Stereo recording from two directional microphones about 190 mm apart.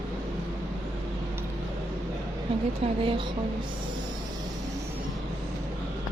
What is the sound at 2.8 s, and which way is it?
Speech, 30° right (ahead or behind).